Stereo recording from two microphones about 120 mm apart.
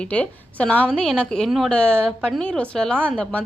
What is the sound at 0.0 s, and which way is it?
A woman's voice, 10° left (ahead or behind).